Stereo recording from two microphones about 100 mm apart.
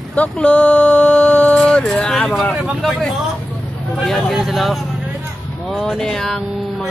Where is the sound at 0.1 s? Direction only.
15° left (ahead or behind).